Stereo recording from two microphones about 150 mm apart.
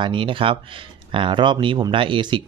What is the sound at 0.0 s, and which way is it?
Speech, 35° right (ahead or behind).